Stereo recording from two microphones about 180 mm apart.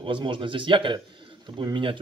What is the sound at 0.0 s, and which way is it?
A man's voice, 25° right (ahead or behind).